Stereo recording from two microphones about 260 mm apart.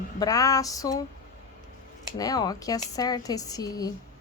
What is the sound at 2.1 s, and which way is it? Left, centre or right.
Speech, centre.